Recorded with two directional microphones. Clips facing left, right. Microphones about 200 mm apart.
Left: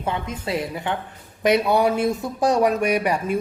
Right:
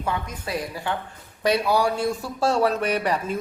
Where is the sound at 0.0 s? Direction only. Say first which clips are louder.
Left 2 dB; 25° left (ahead or behind).